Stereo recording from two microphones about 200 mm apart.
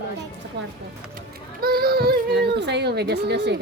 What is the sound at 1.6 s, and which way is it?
Speech, 50° right (ahead or behind).